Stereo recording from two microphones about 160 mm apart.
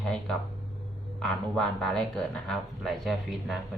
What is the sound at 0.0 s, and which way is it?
Speech, 5° left (ahead or behind).